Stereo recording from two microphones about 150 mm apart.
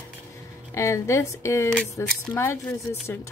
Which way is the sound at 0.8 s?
20° left (ahead or behind).